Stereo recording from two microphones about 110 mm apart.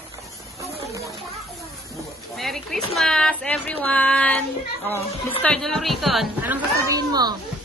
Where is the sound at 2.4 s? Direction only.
Centre (ahead or behind).